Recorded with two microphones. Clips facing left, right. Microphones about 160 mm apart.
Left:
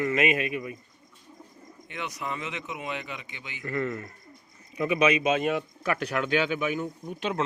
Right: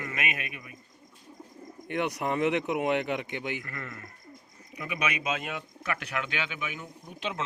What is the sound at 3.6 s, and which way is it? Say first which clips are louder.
A man's voice: left 11 dB; 25° left (ahead or behind).